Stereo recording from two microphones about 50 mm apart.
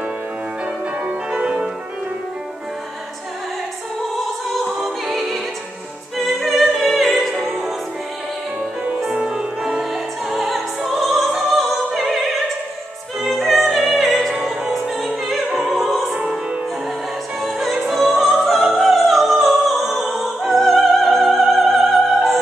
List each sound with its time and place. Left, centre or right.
1.0 s music: centre
4.6 s music: centre
9.0 s music: centre
10.3 s music: centre
11.5 s opera: centre
13.2 s music: centre
17.4 s music: centre